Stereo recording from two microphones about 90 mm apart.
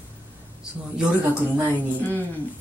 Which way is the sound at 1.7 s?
20° left (ahead or behind).